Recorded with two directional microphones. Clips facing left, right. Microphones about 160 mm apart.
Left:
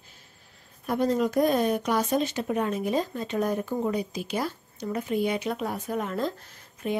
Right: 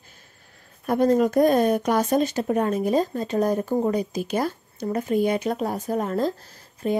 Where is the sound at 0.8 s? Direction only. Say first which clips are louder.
Right 5 dB; 50° right (ahead or behind).